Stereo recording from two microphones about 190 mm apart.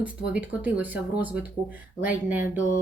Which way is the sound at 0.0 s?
10° right (ahead or behind).